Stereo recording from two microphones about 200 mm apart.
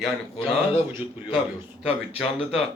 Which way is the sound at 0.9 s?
10° right (ahead or behind).